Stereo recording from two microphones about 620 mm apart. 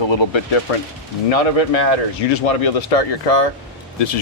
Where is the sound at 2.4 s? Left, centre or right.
Left.